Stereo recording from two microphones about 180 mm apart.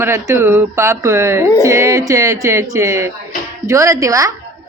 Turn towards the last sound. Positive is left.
turn(degrees=-20)  # may be behind; listen again after turning